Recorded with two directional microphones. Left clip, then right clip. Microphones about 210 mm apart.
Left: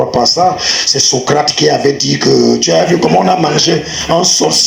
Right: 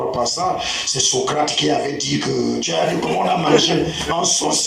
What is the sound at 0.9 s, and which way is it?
Speech, 40° left (ahead or behind).